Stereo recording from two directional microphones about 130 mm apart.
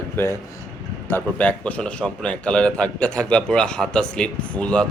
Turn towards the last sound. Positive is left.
turn(degrees=10)  # may be behind; listen again after turning